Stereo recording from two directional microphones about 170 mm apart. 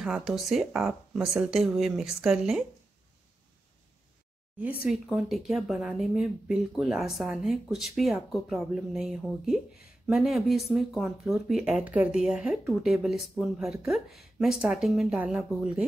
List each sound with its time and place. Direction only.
0.0 s speech: 5° right (ahead or behind)
4.8 s speech: centre (ahead or behind)